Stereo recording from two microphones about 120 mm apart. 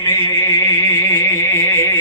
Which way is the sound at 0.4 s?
40° left (ahead or behind).